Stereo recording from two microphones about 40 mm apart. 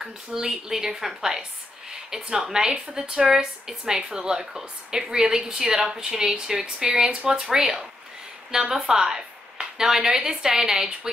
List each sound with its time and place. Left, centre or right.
0.0 s a woman's voice: centre